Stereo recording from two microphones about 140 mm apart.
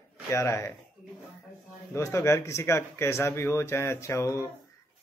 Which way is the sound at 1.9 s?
20° left (ahead or behind).